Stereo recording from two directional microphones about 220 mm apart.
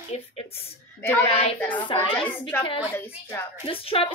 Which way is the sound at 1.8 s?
25° left (ahead or behind).